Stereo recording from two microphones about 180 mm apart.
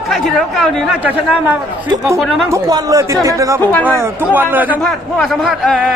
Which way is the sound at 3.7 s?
10° left (ahead or behind).